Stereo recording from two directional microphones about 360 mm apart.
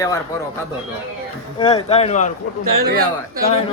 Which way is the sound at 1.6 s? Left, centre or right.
Centre.